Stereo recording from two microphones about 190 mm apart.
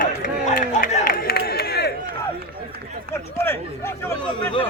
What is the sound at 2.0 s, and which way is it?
Run, 55° right (ahead or behind).